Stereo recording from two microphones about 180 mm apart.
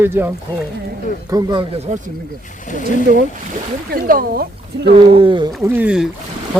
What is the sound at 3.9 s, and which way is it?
Speech, 55° right (ahead or behind).